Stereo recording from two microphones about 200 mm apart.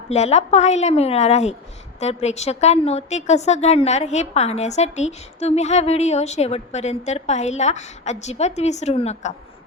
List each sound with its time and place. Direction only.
0.1 s a woman's voice: 35° left (ahead or behind)